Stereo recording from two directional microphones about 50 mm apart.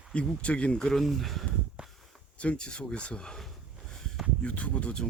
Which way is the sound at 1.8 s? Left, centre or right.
Centre.